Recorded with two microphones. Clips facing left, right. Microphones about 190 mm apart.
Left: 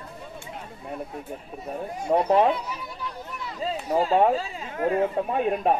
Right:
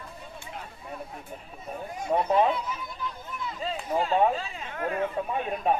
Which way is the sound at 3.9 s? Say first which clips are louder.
Left 4 dB; 35° left (ahead or behind).